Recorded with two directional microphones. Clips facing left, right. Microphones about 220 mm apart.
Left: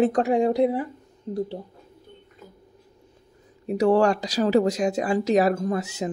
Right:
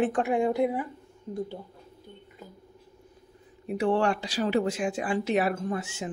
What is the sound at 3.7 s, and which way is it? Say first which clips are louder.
Speech: left 6 dB; 40° left (ahead or behind).